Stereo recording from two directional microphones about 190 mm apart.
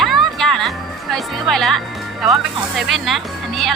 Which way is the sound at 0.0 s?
Centre (ahead or behind).